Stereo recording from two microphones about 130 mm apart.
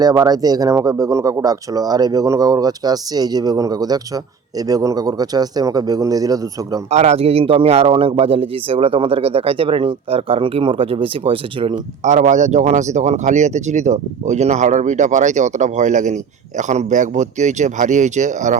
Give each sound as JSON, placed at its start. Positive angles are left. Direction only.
{"t": 0.0, "sound": "speech", "side_deg": -30}
{"t": 6.9, "sound": "a man's voice", "side_deg": -60}
{"t": 12.0, "sound": "speech", "side_deg": -65}